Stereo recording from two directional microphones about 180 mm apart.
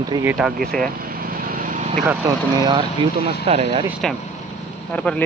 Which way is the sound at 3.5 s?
35° right (ahead or behind).